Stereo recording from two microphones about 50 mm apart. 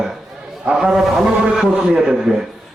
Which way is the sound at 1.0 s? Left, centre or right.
Centre.